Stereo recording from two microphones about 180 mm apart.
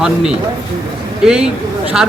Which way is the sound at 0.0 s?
5° right (ahead or behind).